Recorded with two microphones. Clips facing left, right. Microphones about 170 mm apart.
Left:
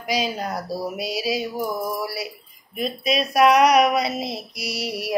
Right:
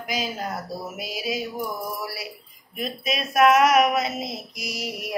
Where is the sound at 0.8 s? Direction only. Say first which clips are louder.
Left 5 dB; 35° left (ahead or behind).